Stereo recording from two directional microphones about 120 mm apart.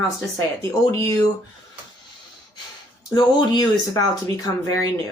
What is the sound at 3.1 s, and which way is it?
Speech, 35° left (ahead or behind).